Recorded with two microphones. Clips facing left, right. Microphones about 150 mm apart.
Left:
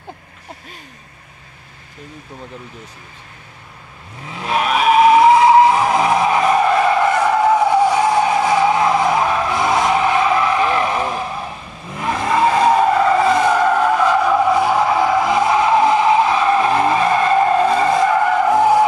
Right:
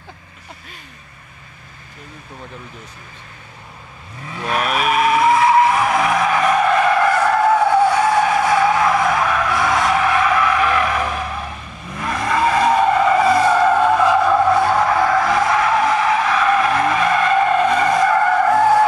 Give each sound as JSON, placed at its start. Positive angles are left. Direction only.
{"t": 4.3, "sound": "vehicle", "side_deg": 20}
{"t": 6.9, "sound": "skidding", "side_deg": 20}
{"t": 12.9, "sound": "vehicle", "side_deg": 0}